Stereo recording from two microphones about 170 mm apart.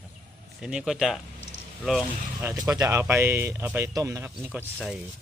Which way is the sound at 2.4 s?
20° right (ahead or behind).